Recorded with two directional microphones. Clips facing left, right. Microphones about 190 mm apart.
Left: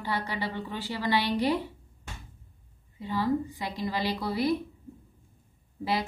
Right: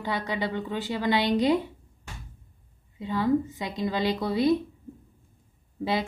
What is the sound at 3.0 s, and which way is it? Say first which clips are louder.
A woman's voice: right 3 dB; 20° right (ahead or behind).